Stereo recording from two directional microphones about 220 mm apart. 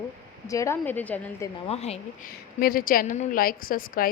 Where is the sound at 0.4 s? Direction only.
15° left (ahead or behind).